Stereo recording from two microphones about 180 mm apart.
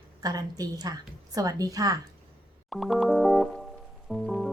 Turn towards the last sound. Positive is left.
turn(degrees=0)  # may be behind; listen again after turning